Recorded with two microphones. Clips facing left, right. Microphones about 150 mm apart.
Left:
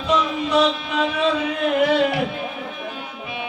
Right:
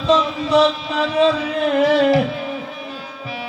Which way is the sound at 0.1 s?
30° right (ahead or behind).